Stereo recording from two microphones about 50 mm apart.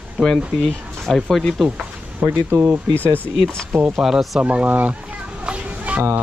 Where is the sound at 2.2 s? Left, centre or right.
Right.